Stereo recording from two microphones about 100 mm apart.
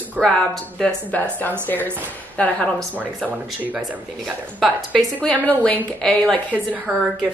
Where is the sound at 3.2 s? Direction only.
15° right (ahead or behind).